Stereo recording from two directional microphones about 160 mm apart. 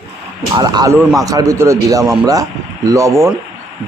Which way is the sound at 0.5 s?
25° right (ahead or behind).